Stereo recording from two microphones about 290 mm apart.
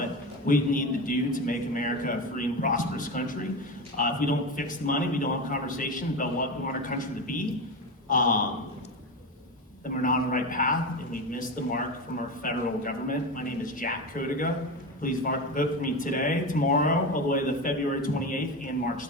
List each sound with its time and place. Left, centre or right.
0.4 s a man's voice: left
9.9 s a man's voice: left